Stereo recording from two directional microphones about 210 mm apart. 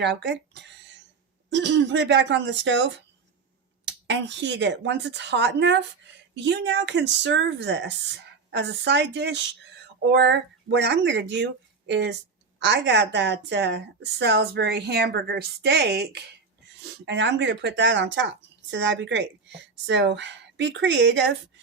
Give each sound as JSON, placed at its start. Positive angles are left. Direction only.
{"t": 0.0, "sound": "speech", "side_deg": -55}
{"t": 3.8, "sound": "speech", "side_deg": -55}